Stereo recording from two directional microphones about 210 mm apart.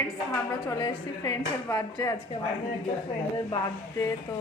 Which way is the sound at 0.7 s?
20° left (ahead or behind).